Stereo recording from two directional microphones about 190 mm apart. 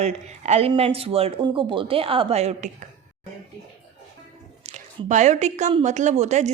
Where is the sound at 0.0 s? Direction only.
35° right (ahead or behind).